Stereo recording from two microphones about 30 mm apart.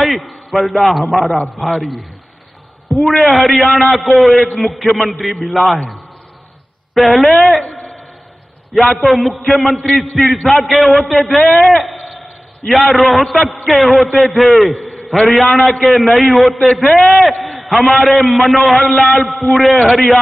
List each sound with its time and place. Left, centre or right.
0.0 s a man's voice: centre
6.9 s a man's voice: centre
7.6 s a sound: left
9.0 s a man's voice: centre